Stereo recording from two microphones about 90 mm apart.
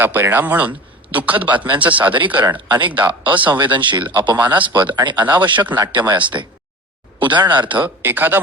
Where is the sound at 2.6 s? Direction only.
55° right (ahead or behind).